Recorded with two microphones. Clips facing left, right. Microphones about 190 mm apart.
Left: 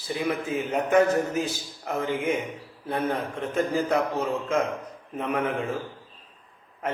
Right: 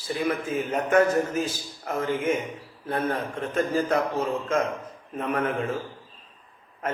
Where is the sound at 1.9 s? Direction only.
15° left (ahead or behind).